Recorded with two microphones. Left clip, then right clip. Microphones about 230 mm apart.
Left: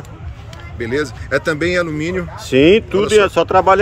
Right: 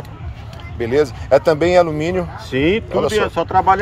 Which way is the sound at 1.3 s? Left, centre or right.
Right.